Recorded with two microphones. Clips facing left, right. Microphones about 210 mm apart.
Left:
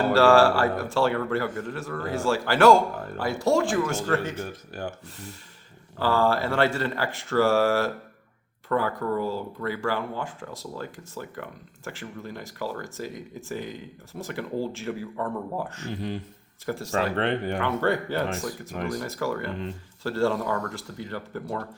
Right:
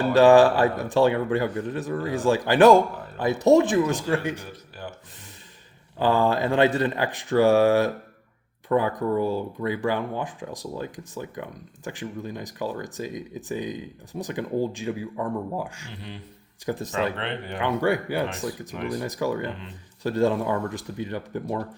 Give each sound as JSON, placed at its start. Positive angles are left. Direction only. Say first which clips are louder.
{"t": 0.1, "sound": "speech", "louder": "right 4 dB", "side_deg": -20}
{"t": 4.7, "sound": "speech", "louder": "left 5 dB", "side_deg": 45}
{"t": 6.0, "sound": "speech", "louder": "right 2 dB", "side_deg": -20}
{"t": 15.9, "sound": "speech", "louder": "left 8 dB", "side_deg": 45}
{"t": 16.6, "sound": "speech", "louder": "even", "side_deg": -20}
{"t": 17.2, "sound": "speech", "louder": "left 6 dB", "side_deg": 45}
{"t": 17.6, "sound": "speech", "louder": "right 7 dB", "side_deg": -15}